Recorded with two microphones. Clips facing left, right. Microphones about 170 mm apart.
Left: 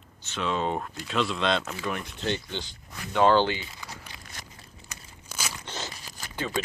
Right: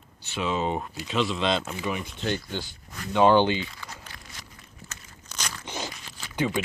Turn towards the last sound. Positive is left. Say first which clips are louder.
# even
turn(degrees=40)  # may be behind; listen again after turning